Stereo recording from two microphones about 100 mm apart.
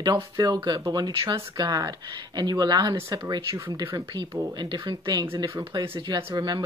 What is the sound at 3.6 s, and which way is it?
Speech, 30° right (ahead or behind).